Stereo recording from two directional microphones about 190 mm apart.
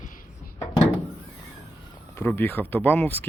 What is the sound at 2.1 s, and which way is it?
Speech, 10° left (ahead or behind).